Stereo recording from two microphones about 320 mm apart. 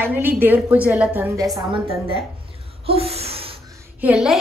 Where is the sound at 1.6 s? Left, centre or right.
Centre.